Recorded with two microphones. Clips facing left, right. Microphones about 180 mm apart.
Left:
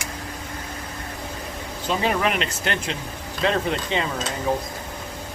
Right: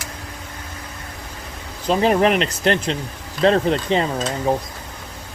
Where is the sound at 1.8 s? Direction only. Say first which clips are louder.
Right 7 dB; 35° right (ahead or behind).